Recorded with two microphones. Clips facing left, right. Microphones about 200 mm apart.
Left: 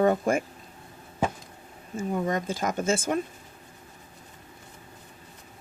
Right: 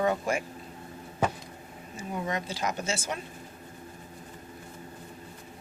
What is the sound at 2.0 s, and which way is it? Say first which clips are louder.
Speech: left 5 dB; 50° left (ahead or behind).